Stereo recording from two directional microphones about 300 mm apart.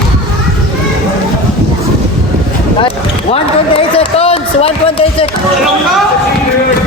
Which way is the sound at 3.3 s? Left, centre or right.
Centre.